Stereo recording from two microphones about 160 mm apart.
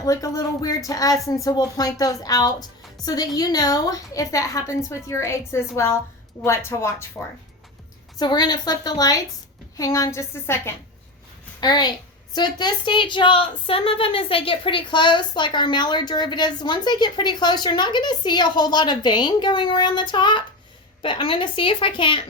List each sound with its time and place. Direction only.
0.0 s a woman's voice: 20° left (ahead or behind)
11.6 s a woman's voice: 25° left (ahead or behind)